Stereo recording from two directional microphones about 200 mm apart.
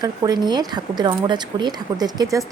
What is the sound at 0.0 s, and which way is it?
A woman's voice, 20° right (ahead or behind).